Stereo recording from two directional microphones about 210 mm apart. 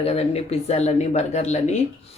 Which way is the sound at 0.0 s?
30° left (ahead or behind).